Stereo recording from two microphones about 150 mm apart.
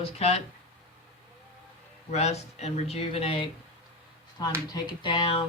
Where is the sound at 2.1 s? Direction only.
45° left (ahead or behind).